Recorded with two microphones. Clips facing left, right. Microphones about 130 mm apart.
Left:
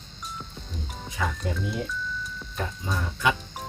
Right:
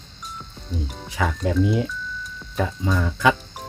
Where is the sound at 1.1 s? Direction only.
90° right.